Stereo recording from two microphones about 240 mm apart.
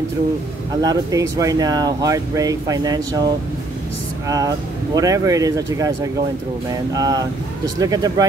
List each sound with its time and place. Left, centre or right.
0.8 s speech: centre
4.9 s speech: centre